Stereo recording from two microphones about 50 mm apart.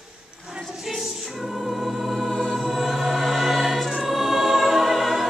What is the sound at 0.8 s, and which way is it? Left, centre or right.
Choir, centre.